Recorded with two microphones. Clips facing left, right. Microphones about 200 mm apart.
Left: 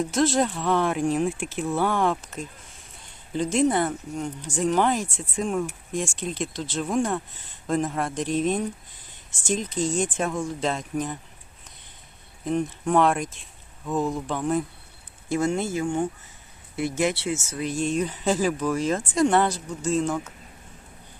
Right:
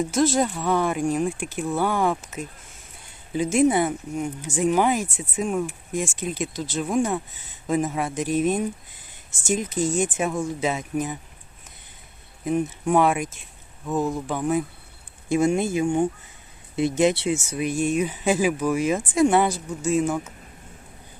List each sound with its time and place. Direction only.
0.0 s speech: centre (ahead or behind)
12.5 s speech: 5° right (ahead or behind)